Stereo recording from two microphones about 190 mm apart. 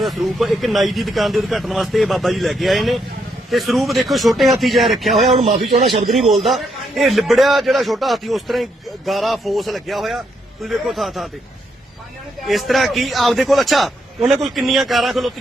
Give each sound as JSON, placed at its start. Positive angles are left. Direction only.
{"t": 0.0, "sound": "speech", "side_deg": 0}
{"t": 5.1, "sound": "a man's voice", "side_deg": -30}
{"t": 6.4, "sound": "speech", "side_deg": 0}
{"t": 12.5, "sound": "speech", "side_deg": 0}